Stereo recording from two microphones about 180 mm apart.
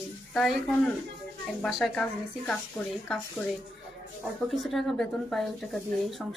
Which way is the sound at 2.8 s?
15° left (ahead or behind).